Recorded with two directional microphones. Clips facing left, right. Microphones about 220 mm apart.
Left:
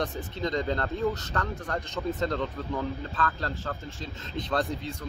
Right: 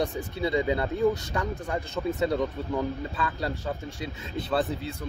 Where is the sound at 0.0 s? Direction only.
10° right (ahead or behind).